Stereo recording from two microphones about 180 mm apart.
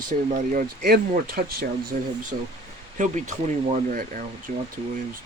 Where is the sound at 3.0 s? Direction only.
45° right (ahead or behind).